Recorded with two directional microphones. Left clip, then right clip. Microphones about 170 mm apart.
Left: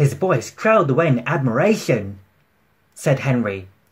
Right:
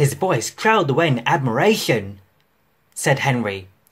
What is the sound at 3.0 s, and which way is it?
Speech, 45° right (ahead or behind).